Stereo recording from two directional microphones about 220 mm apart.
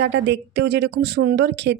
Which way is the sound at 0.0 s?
50° right (ahead or behind).